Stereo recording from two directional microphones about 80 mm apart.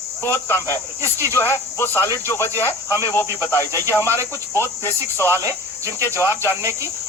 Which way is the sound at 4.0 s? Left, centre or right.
Right.